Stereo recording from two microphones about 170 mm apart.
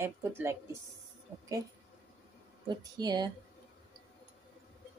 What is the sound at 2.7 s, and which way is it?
Speech, 25° right (ahead or behind).